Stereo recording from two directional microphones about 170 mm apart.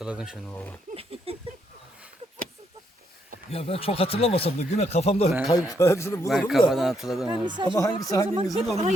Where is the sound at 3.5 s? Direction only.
35° left (ahead or behind).